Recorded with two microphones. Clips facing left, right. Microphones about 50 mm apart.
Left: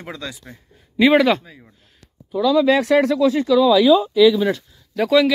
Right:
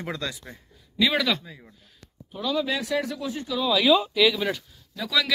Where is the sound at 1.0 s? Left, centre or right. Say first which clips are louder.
Left 9 dB; left.